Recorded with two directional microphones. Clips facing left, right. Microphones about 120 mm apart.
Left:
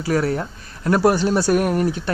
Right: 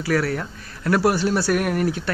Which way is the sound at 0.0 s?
25° left (ahead or behind).